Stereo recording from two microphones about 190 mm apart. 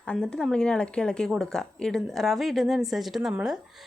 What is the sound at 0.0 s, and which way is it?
Speech, 5° left (ahead or behind).